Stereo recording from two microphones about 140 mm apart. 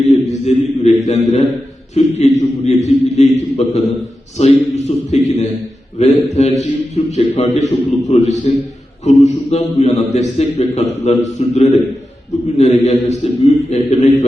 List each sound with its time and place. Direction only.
0.0 s a man's voice: 50° left (ahead or behind)